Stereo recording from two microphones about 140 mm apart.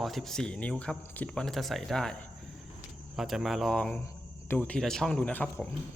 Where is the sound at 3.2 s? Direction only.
Centre (ahead or behind).